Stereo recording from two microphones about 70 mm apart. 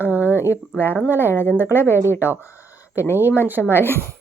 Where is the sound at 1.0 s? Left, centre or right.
Right.